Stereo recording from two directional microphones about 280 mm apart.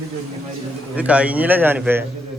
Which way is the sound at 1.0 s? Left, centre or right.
Centre.